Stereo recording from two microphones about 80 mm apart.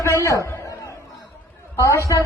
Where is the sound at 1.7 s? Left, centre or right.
Left.